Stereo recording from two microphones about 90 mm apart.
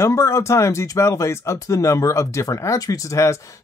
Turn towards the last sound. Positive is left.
turn(degrees=35)  # may be behind; listen again after turning